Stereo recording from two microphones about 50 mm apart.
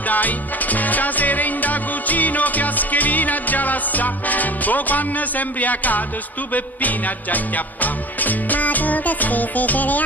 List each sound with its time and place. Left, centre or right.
0.1 s music: left